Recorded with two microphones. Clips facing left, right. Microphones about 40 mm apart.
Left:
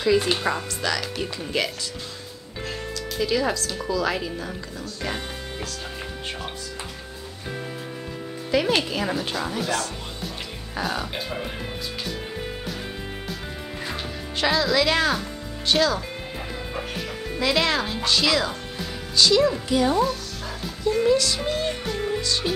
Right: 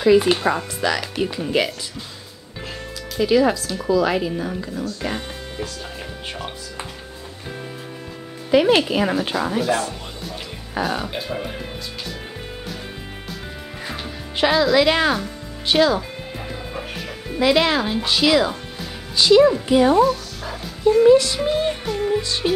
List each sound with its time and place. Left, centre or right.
0.0 s speech: centre
3.2 s speech: centre
8.5 s speech: centre
10.8 s speech: centre
14.3 s speech: centre
17.4 s speech: centre
20.0 s speech: centre
21.0 s speech: right
21.8 s music: centre
22.2 s music: right